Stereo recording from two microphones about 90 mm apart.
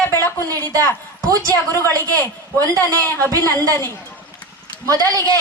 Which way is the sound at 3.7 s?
25° left (ahead or behind).